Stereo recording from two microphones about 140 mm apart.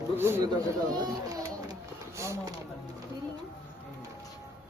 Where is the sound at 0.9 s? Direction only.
25° right (ahead or behind).